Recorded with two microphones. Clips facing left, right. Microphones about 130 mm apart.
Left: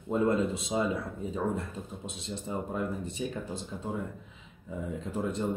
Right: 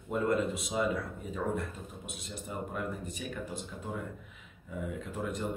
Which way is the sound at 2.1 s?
25° left (ahead or behind).